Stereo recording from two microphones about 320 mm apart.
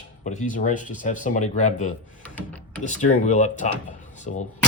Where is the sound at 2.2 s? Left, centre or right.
Centre.